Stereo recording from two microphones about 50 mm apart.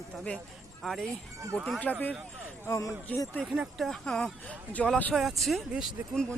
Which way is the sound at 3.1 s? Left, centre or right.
Left.